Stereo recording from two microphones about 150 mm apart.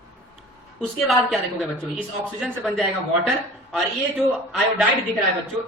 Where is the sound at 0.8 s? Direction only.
Centre (ahead or behind).